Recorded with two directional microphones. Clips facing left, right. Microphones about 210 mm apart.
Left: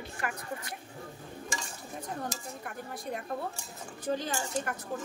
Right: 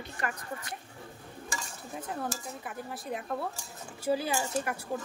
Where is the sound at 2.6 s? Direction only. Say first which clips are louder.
Even; centre (ahead or behind).